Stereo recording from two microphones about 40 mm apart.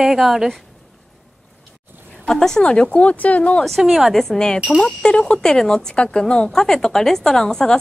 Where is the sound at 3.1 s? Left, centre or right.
Left.